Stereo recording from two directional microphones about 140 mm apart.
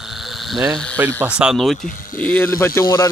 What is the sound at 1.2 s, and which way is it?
Speech, 5° right (ahead or behind).